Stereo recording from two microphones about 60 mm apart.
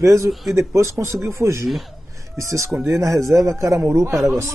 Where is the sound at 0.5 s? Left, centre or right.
Right.